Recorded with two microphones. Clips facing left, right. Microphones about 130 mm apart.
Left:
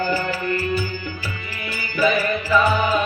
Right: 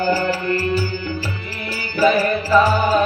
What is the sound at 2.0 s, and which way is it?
Music, 35° right (ahead or behind).